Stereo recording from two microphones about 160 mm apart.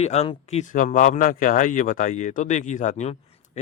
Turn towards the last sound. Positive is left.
turn(degrees=45)  # may be behind; listen again after turning